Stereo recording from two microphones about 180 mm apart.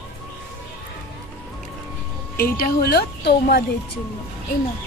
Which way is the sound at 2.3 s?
55° left (ahead or behind).